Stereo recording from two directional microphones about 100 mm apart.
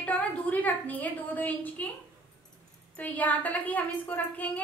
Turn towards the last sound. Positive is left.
turn(degrees=15)  # may be behind; listen again after turning